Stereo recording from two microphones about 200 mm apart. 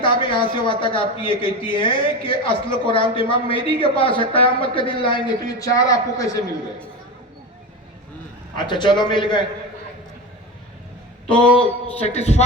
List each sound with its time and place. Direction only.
0.0 s speech: 25° left (ahead or behind)
8.5 s speech: 20° left (ahead or behind)
11.3 s a man's voice: 5° left (ahead or behind)
11.9 s speech: 30° left (ahead or behind)